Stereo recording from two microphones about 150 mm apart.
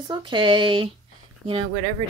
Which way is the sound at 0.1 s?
30° right (ahead or behind).